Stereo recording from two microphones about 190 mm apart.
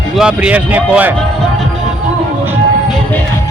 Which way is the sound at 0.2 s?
5° right (ahead or behind).